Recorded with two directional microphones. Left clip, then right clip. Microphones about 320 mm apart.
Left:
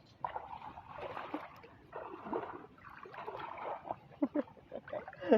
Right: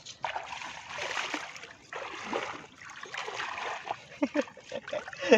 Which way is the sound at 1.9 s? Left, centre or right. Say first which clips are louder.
Right 7 dB; centre.